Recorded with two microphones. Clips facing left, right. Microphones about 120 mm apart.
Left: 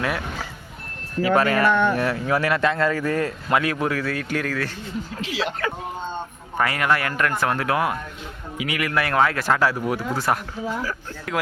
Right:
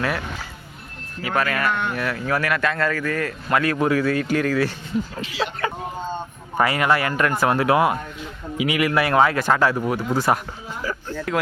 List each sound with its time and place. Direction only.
1.2 s a man's voice: 30° left (ahead or behind)
3.8 s speech: centre (ahead or behind)
5.2 s speech: 90° left
6.6 s speech: 5° right (ahead or behind)